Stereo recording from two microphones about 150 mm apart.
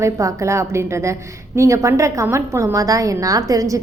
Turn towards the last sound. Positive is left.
turn(degrees=-20)  # may be behind; listen again after turning